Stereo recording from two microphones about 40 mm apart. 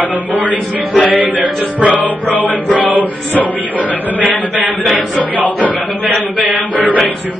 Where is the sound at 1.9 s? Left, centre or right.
Left.